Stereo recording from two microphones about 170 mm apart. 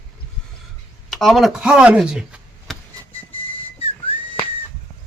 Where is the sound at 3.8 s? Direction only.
35° left (ahead or behind).